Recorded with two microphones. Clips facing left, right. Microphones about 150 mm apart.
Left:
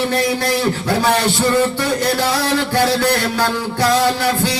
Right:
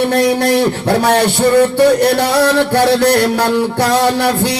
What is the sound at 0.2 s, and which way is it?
Speech, 65° right (ahead or behind).